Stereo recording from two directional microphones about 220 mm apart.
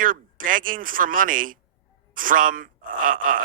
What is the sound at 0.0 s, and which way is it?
Speech, 40° right (ahead or behind).